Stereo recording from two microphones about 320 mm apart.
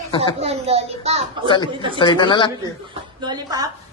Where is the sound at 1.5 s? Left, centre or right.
Centre.